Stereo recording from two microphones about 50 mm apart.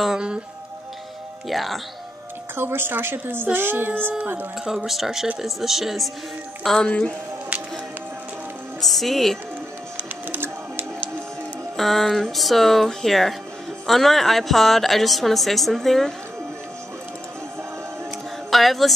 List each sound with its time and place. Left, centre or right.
1.5 s a woman's voice: centre
2.5 s speech: right
4.6 s a woman's voice: centre
6.9 s speech: left
8.8 s a woman's voice: centre
10.3 s music: right
11.7 s a woman's voice: centre
18.5 s speech: centre